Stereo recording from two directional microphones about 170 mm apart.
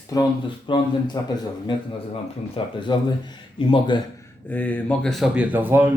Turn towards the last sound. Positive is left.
turn(degrees=-10)  # may be behind; listen again after turning